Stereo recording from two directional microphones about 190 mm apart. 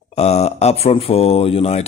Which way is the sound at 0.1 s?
35° left (ahead or behind).